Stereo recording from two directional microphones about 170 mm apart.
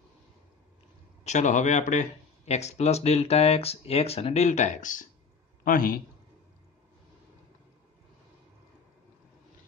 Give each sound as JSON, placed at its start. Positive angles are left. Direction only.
{"t": 1.2, "sound": "a man's voice", "side_deg": 45}